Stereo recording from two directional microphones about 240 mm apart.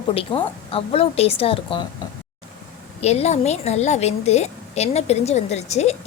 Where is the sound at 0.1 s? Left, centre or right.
Left.